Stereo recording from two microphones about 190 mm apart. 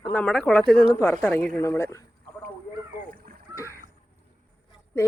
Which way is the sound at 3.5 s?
15° left (ahead or behind).